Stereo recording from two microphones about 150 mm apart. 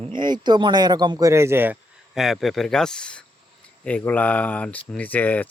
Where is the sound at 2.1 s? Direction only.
Centre (ahead or behind).